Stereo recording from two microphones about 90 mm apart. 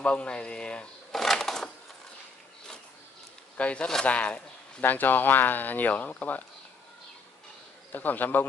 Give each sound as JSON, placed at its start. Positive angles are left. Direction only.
{"t": 0.0, "sound": "speech", "side_deg": 15}
{"t": 3.5, "sound": "speech", "side_deg": 15}
{"t": 7.9, "sound": "a man's voice", "side_deg": 20}